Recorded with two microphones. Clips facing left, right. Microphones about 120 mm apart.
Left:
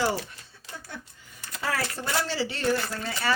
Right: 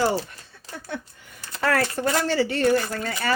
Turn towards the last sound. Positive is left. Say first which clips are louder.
# right 4 dB
turn(degrees=-50)  # may be behind; listen again after turning